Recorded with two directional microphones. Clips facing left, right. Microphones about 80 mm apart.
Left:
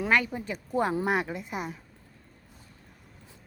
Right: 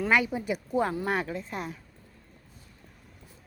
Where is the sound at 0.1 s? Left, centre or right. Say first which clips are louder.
Right 1 dB; centre.